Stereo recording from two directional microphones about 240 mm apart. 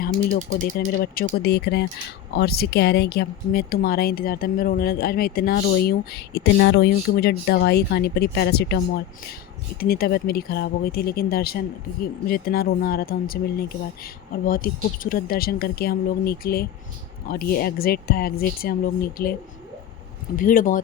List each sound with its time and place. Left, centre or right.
0.0 s speech: left
9.8 s speech: left
20.3 s speech: left